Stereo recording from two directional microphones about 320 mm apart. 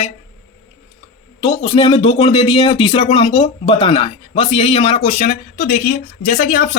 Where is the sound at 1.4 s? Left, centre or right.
Centre.